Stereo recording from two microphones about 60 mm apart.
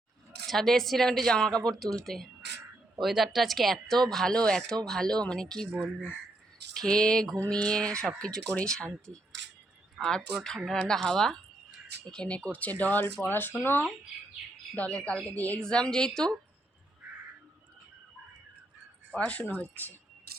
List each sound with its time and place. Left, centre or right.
0.4 s a woman's voice: centre
9.1 s speech: left
10.0 s a woman's voice: centre; by 13.8 s left
14.8 s speech: left
15.5 s a woman's voice: centre
19.1 s speech: left